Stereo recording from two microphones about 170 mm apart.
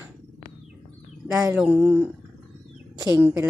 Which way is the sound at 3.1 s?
10° right (ahead or behind).